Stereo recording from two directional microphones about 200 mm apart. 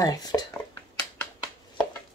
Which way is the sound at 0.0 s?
20° left (ahead or behind).